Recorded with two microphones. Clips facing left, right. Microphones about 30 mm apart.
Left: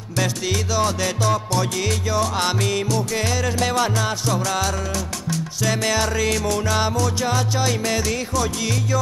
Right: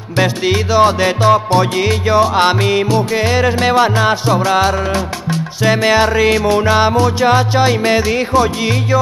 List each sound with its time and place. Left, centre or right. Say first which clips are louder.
0.2 s music: right 9 dB; right